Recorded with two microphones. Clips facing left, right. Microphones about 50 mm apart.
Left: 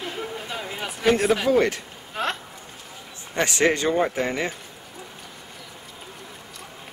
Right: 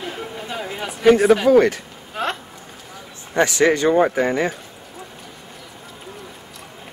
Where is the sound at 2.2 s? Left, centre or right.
Centre.